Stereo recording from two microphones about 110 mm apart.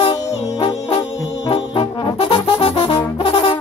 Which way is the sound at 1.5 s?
60° left (ahead or behind).